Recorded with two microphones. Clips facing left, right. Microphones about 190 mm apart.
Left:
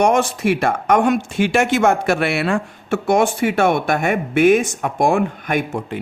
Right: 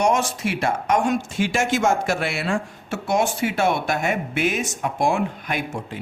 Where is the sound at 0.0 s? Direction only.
60° left (ahead or behind).